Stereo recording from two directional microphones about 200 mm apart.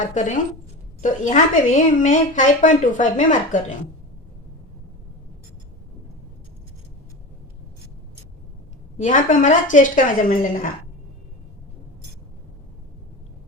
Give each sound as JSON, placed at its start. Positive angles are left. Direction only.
{"t": 0.0, "sound": "speech", "side_deg": 40}
{"t": 9.0, "sound": "speech", "side_deg": 40}